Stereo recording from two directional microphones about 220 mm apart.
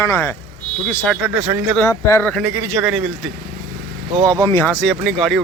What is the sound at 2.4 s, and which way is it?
Speech, 10° right (ahead or behind).